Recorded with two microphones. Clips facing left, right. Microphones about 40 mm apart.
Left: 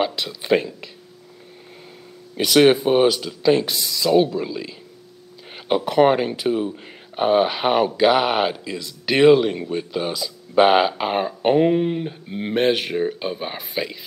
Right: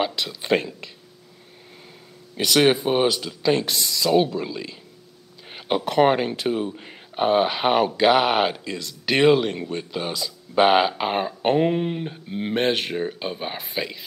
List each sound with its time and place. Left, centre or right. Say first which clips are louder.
0.0 s speech: left 2 dB; centre
2.3 s speech: left 4 dB; centre